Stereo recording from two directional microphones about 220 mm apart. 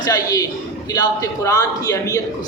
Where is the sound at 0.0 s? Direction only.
15° left (ahead or behind).